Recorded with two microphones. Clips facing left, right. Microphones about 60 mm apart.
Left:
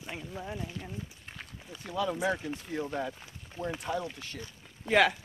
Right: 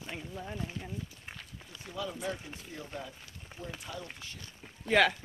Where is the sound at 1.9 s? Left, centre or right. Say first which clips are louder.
Left 7 dB; left.